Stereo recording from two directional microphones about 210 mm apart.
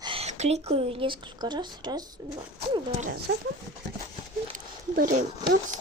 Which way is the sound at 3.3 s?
50° right (ahead or behind).